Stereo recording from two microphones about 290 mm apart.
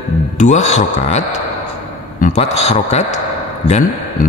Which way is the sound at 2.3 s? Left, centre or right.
Left.